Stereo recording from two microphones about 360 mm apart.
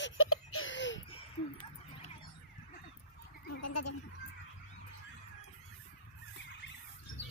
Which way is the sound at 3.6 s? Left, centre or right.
Left.